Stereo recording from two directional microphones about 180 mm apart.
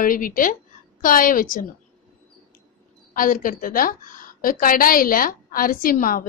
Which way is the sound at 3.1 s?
50° left (ahead or behind).